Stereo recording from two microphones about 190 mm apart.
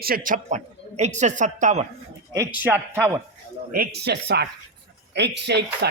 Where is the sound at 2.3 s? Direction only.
10° right (ahead or behind).